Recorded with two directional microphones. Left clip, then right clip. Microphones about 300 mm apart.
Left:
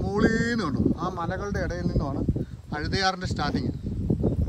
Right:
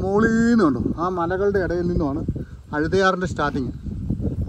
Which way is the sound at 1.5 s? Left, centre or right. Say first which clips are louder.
Right 9 dB; right.